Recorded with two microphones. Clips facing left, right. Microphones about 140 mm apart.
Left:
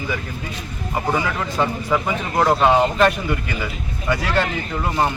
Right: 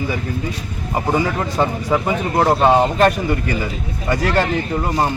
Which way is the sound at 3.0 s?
40° right (ahead or behind).